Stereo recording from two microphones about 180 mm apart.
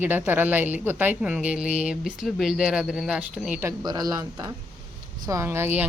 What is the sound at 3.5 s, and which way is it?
A woman's voice, 20° right (ahead or behind).